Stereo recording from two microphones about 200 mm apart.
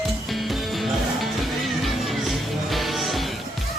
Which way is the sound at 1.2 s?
Centre (ahead or behind).